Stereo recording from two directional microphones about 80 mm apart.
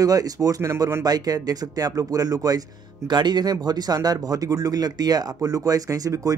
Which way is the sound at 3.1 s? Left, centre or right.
Right.